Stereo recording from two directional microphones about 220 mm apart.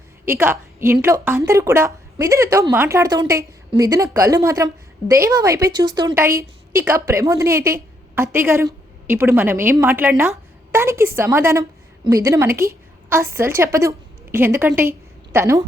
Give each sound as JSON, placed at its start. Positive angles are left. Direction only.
{"t": 0.3, "sound": "a woman's voice", "side_deg": -10}